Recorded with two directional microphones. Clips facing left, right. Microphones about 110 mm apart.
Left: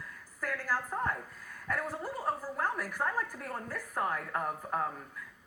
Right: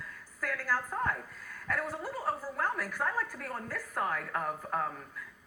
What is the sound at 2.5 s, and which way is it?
A woman's voice, 5° left (ahead or behind).